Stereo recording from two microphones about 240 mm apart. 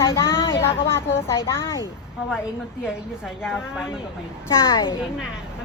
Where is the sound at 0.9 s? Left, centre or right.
Centre.